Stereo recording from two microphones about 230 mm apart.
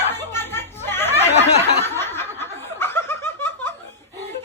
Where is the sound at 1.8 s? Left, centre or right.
Centre.